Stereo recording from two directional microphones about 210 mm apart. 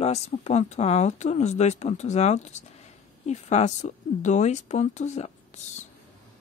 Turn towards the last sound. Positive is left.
turn(degrees=35)  # may be behind; listen again after turning